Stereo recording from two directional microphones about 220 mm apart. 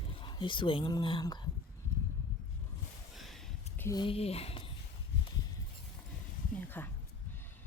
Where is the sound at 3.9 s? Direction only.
20° left (ahead or behind).